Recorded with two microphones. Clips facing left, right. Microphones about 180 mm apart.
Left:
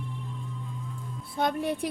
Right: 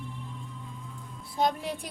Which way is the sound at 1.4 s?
55° left (ahead or behind).